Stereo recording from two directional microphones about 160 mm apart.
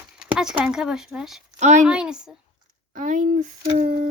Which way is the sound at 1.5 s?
45° right (ahead or behind).